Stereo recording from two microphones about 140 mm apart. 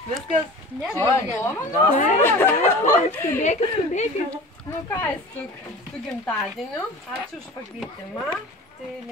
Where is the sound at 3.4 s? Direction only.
55° left (ahead or behind).